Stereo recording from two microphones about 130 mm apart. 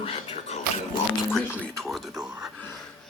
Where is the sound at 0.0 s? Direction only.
55° left (ahead or behind).